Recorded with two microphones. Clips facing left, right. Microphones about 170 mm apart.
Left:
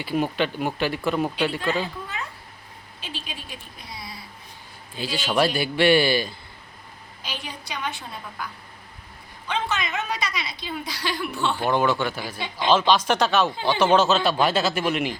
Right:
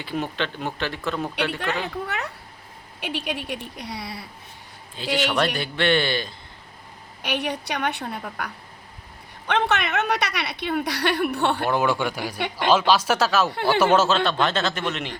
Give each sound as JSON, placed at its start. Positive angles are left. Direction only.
{"t": 0.0, "sound": "speech", "side_deg": 10}
{"t": 1.4, "sound": "a woman's voice", "side_deg": -70}
{"t": 5.0, "sound": "speech", "side_deg": 5}
{"t": 7.2, "sound": "a woman's voice", "side_deg": -65}
{"t": 9.5, "sound": "a woman's voice", "side_deg": -70}
{"t": 11.7, "sound": "speech", "side_deg": -10}
{"t": 14.3, "sound": "speech", "side_deg": 10}